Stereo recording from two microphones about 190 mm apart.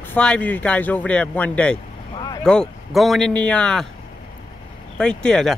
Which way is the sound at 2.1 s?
20° left (ahead or behind).